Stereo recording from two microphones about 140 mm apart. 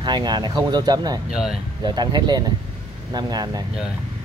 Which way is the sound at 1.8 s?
30° right (ahead or behind).